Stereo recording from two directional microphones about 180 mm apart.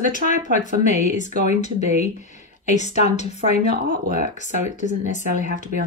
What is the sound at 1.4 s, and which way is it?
A woman's voice, 40° left (ahead or behind).